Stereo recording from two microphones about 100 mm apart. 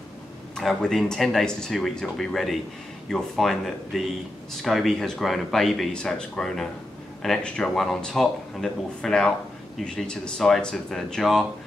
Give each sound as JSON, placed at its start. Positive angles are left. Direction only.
{"t": 0.6, "sound": "a man's voice", "side_deg": 5}